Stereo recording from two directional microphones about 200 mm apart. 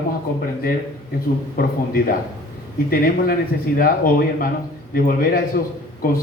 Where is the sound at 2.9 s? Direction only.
50° left (ahead or behind).